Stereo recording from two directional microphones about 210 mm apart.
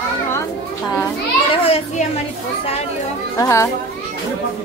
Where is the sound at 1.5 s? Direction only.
30° left (ahead or behind).